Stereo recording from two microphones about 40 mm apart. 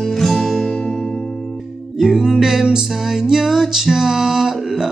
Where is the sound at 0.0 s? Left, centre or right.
Centre.